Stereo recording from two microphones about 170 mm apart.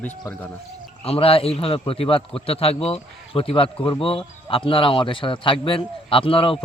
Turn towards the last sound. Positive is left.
turn(degrees=30)  # may be behind; listen again after turning